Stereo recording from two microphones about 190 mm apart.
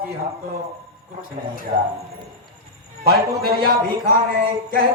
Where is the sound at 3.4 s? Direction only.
55° right (ahead or behind).